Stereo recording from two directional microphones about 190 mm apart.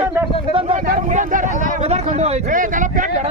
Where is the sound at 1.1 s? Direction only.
40° right (ahead or behind).